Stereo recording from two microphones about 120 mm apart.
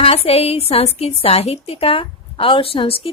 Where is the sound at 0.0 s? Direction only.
55° left (ahead or behind).